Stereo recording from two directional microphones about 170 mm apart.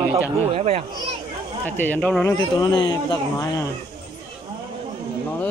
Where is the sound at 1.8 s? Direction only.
10° left (ahead or behind).